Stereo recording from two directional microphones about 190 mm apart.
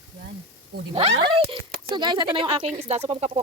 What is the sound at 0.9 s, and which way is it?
Speech, 35° right (ahead or behind).